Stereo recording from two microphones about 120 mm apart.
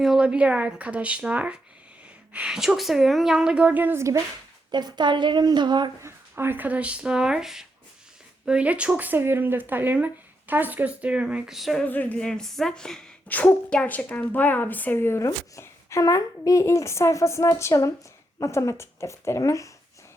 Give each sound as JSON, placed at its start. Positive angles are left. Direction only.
{"t": 0.0, "sound": "a woman's voice", "side_deg": -5}
{"t": 4.7, "sound": "a woman's voice", "side_deg": -35}
{"t": 6.0, "sound": "speech", "side_deg": -20}
{"t": 11.9, "sound": "a woman's voice", "side_deg": 15}